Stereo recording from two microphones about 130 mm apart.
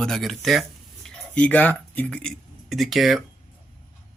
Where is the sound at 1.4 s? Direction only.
10° left (ahead or behind).